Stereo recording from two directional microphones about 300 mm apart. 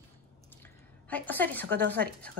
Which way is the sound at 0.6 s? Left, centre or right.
Centre.